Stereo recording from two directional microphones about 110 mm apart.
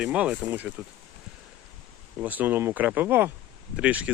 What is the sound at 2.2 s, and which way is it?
Speech, 15° right (ahead or behind).